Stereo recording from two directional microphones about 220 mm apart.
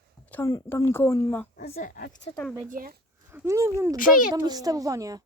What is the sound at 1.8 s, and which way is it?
Speech, 40° left (ahead or behind).